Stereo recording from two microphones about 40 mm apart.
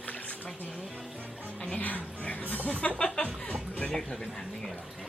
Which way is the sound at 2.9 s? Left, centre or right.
Left.